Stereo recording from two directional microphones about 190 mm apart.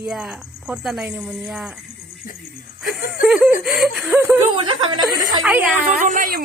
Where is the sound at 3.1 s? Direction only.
Centre (ahead or behind).